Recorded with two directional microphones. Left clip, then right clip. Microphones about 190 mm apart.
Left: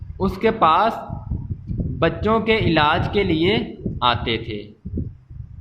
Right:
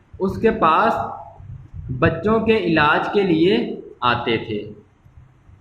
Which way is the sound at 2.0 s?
45° left (ahead or behind).